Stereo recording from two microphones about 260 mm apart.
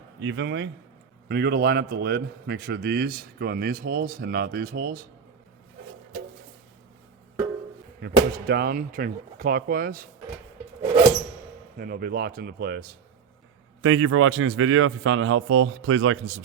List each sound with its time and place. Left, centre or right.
0.2 s a man's voice: right
8.0 s a man's voice: right
11.8 s a man's voice: right
13.8 s a man's voice: right